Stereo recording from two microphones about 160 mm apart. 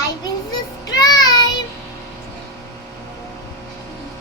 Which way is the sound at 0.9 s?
25° left (ahead or behind).